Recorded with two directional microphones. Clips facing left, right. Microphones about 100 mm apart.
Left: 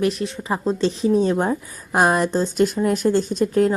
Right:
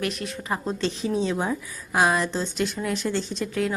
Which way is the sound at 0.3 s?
30° left (ahead or behind).